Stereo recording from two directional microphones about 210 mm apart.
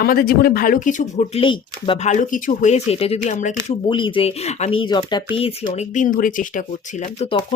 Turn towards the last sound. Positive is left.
turn(degrees=30)  # may be behind; listen again after turning